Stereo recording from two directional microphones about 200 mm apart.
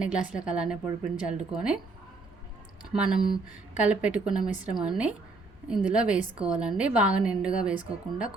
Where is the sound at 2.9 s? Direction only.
5° right (ahead or behind).